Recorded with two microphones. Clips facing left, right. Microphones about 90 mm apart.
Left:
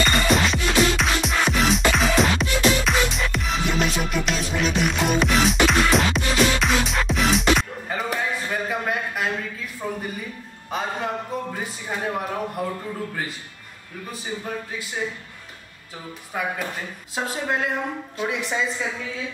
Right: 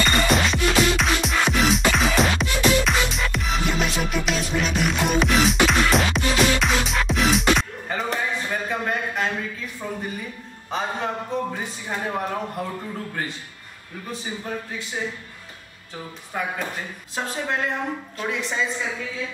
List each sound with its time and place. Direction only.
0.0 s music: centre (ahead or behind)
9.8 s a sound: centre (ahead or behind)
10.7 s speech: centre (ahead or behind)
14.1 s speech: 5° left (ahead or behind)
16.3 s a woman's voice: centre (ahead or behind)